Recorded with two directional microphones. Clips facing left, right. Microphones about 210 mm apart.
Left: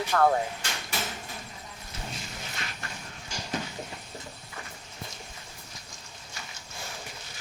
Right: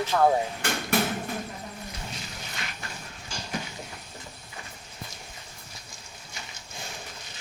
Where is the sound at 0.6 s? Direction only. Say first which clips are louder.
Right 10 dB; 55° right (ahead or behind).